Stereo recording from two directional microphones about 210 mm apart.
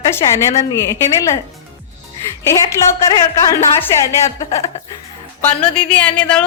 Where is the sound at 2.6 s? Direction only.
15° left (ahead or behind).